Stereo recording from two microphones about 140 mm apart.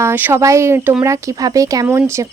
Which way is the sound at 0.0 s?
15° right (ahead or behind).